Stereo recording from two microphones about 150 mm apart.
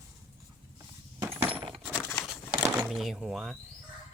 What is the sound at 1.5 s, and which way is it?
Coin, 35° right (ahead or behind).